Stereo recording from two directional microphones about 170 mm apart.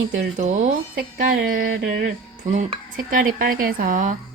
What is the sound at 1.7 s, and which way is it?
Speech, 70° right (ahead or behind).